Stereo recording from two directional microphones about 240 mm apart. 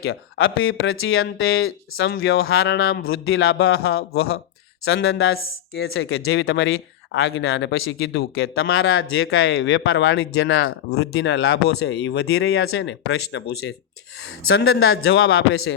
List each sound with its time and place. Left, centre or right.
0.0 s speech: left
3.3 s speech: left
4.9 s speech: left
9.0 s speech: left
14.6 s speech: left